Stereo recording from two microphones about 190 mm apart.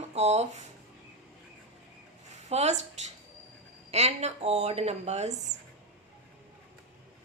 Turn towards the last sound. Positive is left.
turn(degrees=-35)  # may be behind; listen again after turning